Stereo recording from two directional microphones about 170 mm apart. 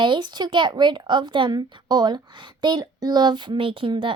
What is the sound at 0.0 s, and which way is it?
Speech, 25° right (ahead or behind).